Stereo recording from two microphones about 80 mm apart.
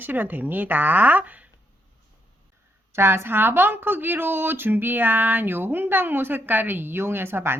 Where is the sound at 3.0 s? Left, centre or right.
Right.